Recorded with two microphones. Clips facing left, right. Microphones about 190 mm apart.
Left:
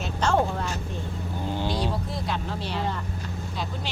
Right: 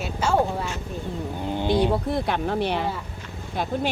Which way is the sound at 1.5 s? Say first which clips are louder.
Right 8 dB; 20° right (ahead or behind).